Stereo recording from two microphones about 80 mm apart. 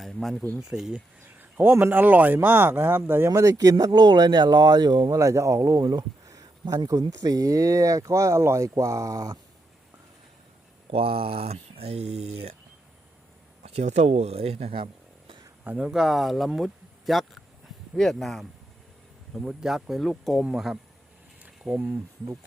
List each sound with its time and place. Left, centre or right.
0.0 s speech: centre
0.6 s speech: centre
1.4 s a sound: right
1.7 s speech: right
3.2 s speech: right
5.1 s speech: right
15.6 s speech: centre
15.9 s speech: centre
21.7 s speech: right